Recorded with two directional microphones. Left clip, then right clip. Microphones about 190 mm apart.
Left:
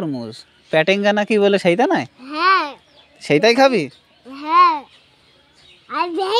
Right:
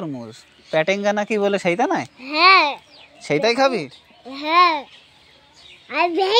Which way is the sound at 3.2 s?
65° left (ahead or behind).